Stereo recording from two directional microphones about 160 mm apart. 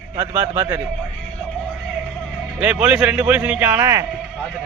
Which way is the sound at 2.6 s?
10° right (ahead or behind).